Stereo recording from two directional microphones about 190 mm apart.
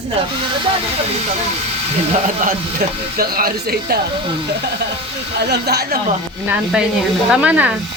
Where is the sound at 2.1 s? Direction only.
45° right (ahead or behind).